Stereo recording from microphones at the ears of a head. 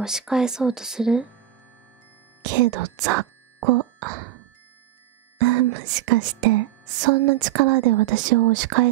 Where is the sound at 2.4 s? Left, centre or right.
Right.